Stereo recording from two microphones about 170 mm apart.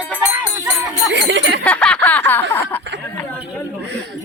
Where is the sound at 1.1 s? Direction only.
90° right.